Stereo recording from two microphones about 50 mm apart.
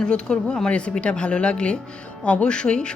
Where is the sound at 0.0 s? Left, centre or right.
Centre.